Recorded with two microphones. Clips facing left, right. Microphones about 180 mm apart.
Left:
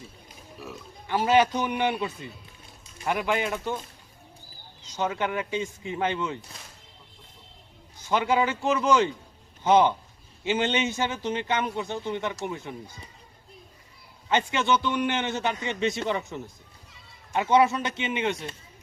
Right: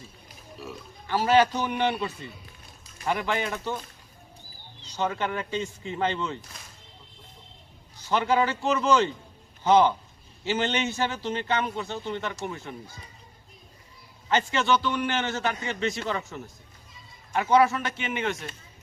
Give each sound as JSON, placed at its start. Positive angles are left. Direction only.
{"t": 1.0, "sound": "a man's voice", "side_deg": 15}
{"t": 4.9, "sound": "a man's voice", "side_deg": 10}
{"t": 8.1, "sound": "a man's voice", "side_deg": 10}
{"t": 14.3, "sound": "a man's voice", "side_deg": 15}